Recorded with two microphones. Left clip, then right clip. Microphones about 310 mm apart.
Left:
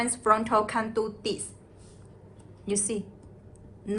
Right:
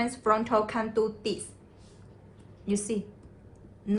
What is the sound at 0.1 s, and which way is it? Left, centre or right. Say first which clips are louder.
A woman's voice: left 4 dB; left.